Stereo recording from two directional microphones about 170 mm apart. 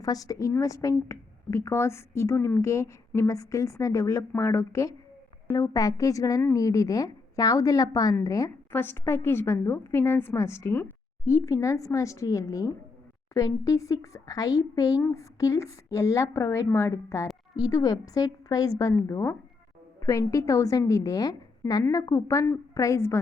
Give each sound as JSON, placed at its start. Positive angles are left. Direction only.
{"t": 0.0, "sound": "a woman's voice", "side_deg": 20}